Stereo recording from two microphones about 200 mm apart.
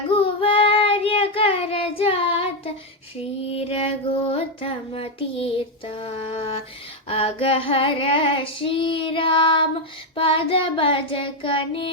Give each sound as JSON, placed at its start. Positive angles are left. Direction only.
{"t": 0.1, "sound": "child singing", "side_deg": 25}
{"t": 3.4, "sound": "female singing", "side_deg": 30}